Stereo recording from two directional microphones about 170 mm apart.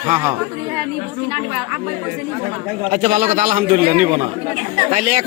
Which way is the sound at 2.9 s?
45° right (ahead or behind).